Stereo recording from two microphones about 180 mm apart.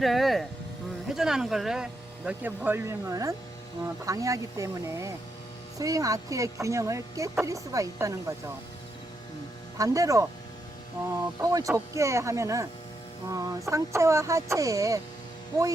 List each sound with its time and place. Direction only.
0.0 s speech: centre (ahead or behind); by 8.2 s 20° right (ahead or behind)
9.7 s speech: 20° right (ahead or behind)